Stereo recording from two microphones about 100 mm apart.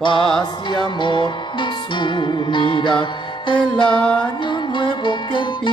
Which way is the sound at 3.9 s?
10° left (ahead or behind).